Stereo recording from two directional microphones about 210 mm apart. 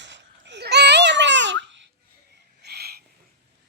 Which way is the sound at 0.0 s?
60° right (ahead or behind).